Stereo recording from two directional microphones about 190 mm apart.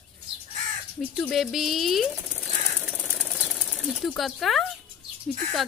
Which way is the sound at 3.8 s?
Centre (ahead or behind).